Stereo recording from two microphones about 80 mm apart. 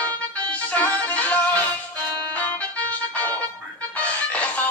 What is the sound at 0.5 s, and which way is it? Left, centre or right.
Music, centre.